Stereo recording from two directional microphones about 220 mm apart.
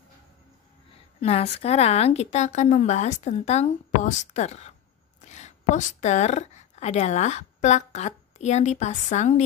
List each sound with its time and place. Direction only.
1.2 s a woman's voice: 30° left (ahead or behind)